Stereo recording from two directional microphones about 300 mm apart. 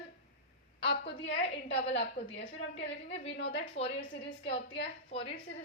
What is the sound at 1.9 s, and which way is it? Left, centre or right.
Speech, left.